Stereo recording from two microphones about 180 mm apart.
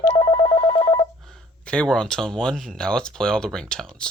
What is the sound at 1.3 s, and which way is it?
Speech, 5° left (ahead or behind).